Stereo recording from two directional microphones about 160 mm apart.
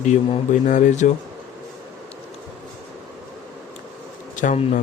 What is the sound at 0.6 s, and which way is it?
Speech, 50° left (ahead or behind).